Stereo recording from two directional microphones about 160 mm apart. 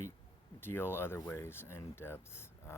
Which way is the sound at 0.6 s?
15° left (ahead or behind).